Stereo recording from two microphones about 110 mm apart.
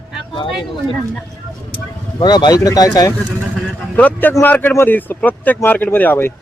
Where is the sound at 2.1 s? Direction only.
45° left (ahead or behind).